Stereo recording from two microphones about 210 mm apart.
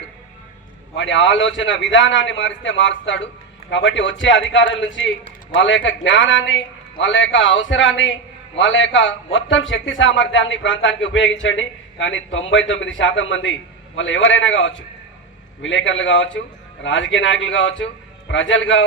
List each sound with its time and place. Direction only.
0.9 s a man's voice: 60° left (ahead or behind)